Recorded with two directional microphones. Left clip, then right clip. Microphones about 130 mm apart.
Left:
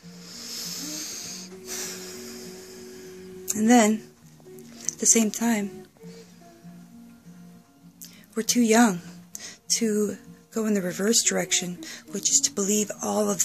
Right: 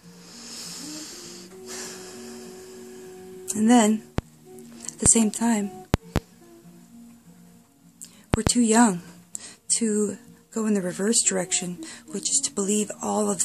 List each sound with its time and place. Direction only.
0.2 s music: 40° right (ahead or behind)
4.7 s speech: 35° right (ahead or behind)
8.4 s speech: 35° right (ahead or behind)